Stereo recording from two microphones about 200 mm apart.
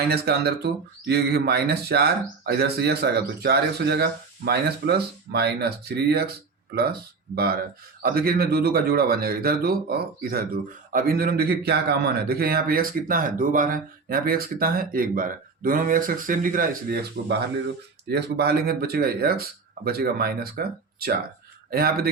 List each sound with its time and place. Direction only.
0.1 s speech: 55° right (ahead or behind)
7.3 s speech: 50° right (ahead or behind)